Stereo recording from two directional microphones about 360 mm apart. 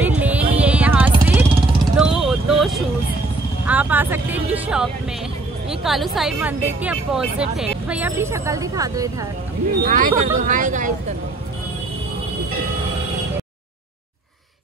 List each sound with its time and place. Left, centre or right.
0.0 s music: centre
2.0 s vehicle: centre
3.6 s music: centre
5.7 s speech: centre
9.8 s speech: right